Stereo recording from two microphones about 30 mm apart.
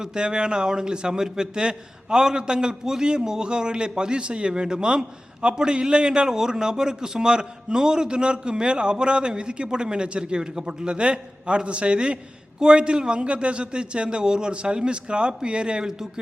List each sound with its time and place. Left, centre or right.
0.0 s a man's voice: right
14.5 s a man's voice: right
15.9 s a man's voice: centre